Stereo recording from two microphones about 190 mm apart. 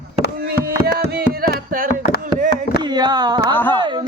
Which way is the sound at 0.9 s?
55° right (ahead or behind).